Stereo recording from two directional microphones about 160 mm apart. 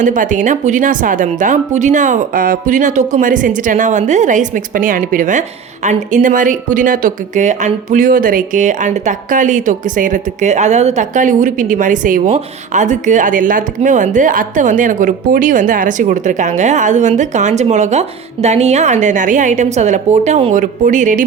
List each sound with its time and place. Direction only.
0.0 s a woman's voice: 50° right (ahead or behind)